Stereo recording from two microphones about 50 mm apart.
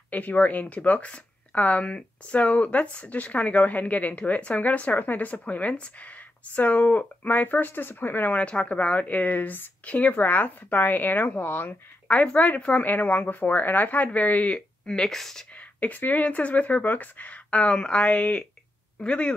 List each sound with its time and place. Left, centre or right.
0.1 s speech: left
8.3 s speech: left
12.1 s speech: left
14.9 s speech: centre
15.5 s speech: left